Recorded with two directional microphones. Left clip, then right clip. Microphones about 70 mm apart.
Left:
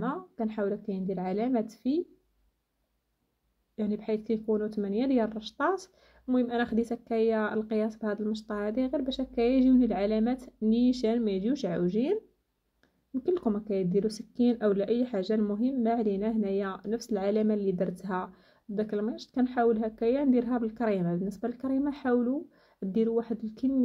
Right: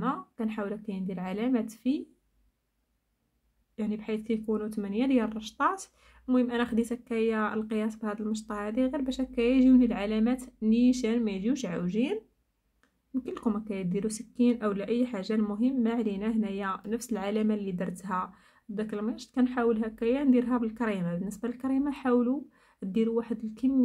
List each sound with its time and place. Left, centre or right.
0.0 s speech: left
3.7 s speech: left
13.2 s speech: left